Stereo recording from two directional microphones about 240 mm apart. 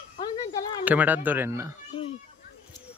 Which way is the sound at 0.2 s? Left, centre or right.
Centre.